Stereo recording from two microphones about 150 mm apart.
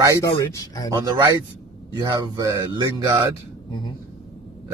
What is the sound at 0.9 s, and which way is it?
Speech, 25° right (ahead or behind).